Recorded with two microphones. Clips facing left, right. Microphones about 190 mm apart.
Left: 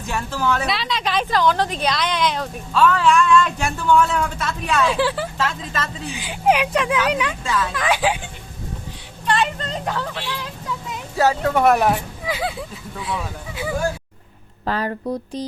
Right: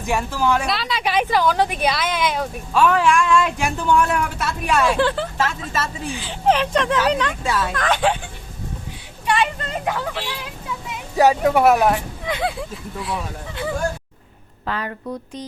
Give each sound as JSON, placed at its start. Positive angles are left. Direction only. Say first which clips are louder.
{"t": 0.0, "sound": "speech", "louder": "right 3 dB", "side_deg": -15}
{"t": 0.7, "sound": "speech", "louder": "right 1 dB", "side_deg": 0}
{"t": 4.9, "sound": "speech", "louder": "right 1 dB", "side_deg": 5}
{"t": 5.5, "sound": "speech", "louder": "right 1 dB", "side_deg": -10}
{"t": 6.1, "sound": "speech", "louder": "left 1 dB", "side_deg": 15}
{"t": 7.4, "sound": "speech", "louder": "right 1 dB", "side_deg": -10}
{"t": 7.7, "sound": "speech", "louder": "right 1 dB", "side_deg": 5}
{"t": 9.2, "sound": "speech", "louder": "even", "side_deg": -10}
{"t": 11.2, "sound": "speech", "louder": "right 3 dB", "side_deg": -15}
{"t": 11.6, "sound": "speech", "louder": "left 2 dB", "side_deg": 0}
{"t": 14.6, "sound": "speech", "louder": "left 4 dB", "side_deg": 35}